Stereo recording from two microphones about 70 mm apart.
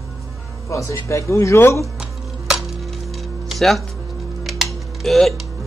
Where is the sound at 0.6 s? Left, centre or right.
Left.